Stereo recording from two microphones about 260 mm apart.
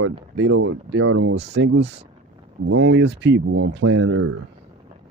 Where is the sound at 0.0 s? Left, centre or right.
Right.